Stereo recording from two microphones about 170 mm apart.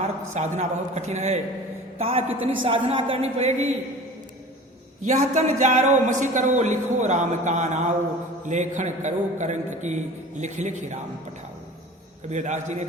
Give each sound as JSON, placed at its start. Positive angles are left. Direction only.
{"t": 0.0, "sound": "a man's voice", "side_deg": -45}
{"t": 5.0, "sound": "a man's voice", "side_deg": -40}
{"t": 12.3, "sound": "a man's voice", "side_deg": -45}